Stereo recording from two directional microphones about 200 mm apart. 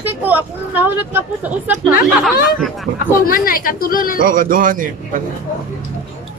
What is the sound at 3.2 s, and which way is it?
Speech, 45° left (ahead or behind).